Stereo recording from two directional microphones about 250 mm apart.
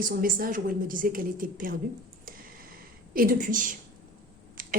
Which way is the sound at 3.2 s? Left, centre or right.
Right.